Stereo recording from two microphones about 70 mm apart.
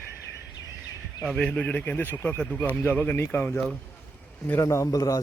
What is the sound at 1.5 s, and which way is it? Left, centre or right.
Speech, left.